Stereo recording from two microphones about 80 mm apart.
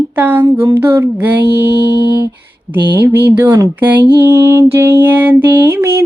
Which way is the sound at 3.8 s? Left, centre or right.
Right.